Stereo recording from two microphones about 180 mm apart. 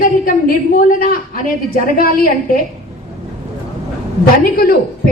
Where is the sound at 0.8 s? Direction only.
50° left (ahead or behind).